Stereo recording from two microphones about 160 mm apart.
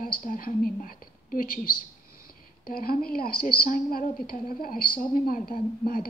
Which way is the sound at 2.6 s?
65° left (ahead or behind).